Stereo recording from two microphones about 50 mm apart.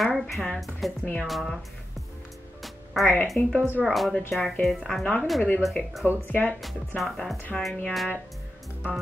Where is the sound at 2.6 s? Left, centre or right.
Centre.